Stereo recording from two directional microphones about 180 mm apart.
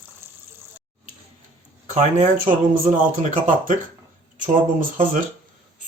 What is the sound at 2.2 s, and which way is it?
Speech, 45° right (ahead or behind).